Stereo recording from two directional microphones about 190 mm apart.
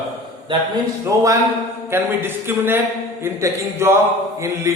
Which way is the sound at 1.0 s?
15° right (ahead or behind).